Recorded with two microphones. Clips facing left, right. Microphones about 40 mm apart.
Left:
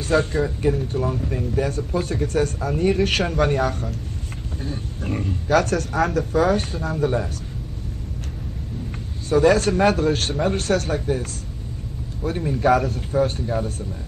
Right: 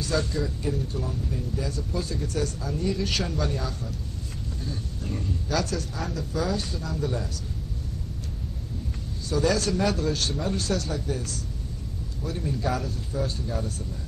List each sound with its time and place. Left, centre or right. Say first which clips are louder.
0.0 s speech: left 7 dB; left
4.6 s speech: left 6 dB; left
9.3 s speech: left 8 dB; left